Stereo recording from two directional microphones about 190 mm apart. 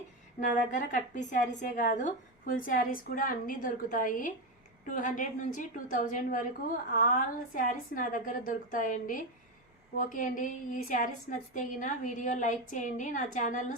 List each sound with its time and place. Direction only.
0.3 s a woman's voice: 40° left (ahead or behind)